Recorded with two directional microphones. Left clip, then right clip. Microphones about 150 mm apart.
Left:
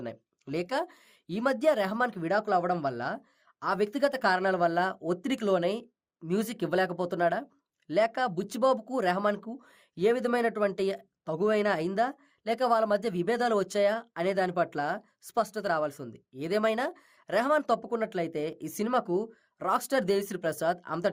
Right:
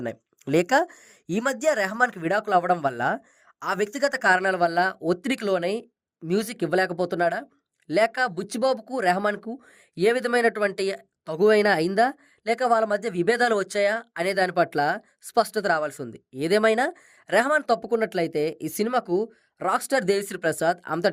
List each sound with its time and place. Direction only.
0.4 s speech: 60° right (ahead or behind); by 4.5 s 40° right (ahead or behind)
4.5 s speech: 25° right (ahead or behind)
5.5 s speech: 20° right (ahead or behind)
9.9 s speech: 35° right (ahead or behind)
17.6 s speech: 20° right (ahead or behind)